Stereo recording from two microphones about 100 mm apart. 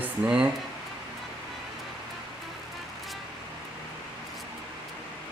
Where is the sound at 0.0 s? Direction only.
10° right (ahead or behind).